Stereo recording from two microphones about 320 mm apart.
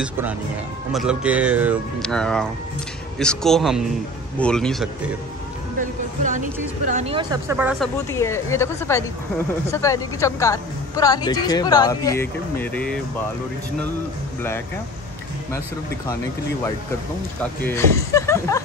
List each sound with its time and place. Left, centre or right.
0.0 s speech: centre
5.8 s speech: right; by 7.9 s centre
8.1 s a woman's voice: centre
17.4 s a woman's voice: centre